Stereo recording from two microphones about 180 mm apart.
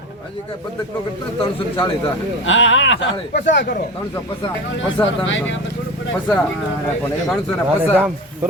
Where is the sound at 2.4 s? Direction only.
90° left.